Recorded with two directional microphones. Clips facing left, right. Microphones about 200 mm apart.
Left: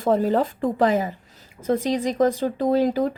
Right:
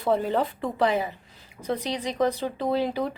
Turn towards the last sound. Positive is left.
turn(degrees=45)  # may be behind; listen again after turning